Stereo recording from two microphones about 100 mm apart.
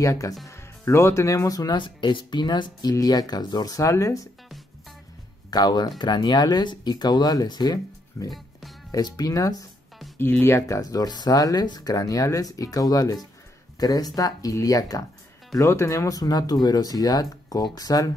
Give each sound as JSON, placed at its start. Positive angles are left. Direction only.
{"t": 0.0, "sound": "speech", "side_deg": 35}
{"t": 1.8, "sound": "speech", "side_deg": 50}
{"t": 5.5, "sound": "speech", "side_deg": 45}
{"t": 8.3, "sound": "music", "side_deg": 0}
{"t": 8.9, "sound": "speech", "side_deg": 40}
{"t": 10.4, "sound": "speech", "side_deg": 25}
{"t": 10.8, "sound": "speech", "side_deg": 40}